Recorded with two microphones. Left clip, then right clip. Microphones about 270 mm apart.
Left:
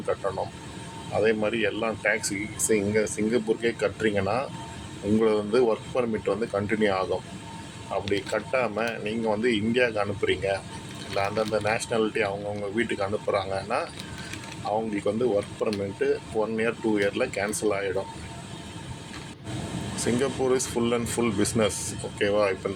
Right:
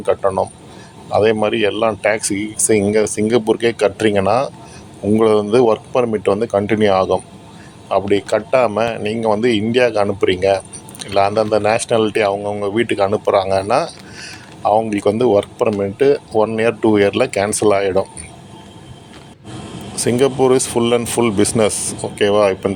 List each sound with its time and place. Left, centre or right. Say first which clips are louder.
0.0 s speech: right 12 dB; right
20.0 s speech: right 12 dB; right